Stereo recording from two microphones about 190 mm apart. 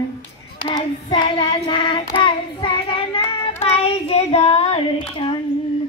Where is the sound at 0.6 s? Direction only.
25° left (ahead or behind).